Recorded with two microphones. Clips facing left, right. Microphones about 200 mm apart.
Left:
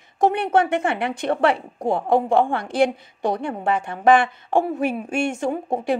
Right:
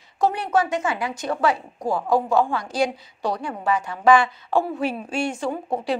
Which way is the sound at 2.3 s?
55° left (ahead or behind).